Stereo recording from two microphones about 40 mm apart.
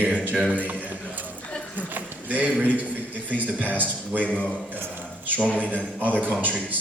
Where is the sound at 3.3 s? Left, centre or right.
Right.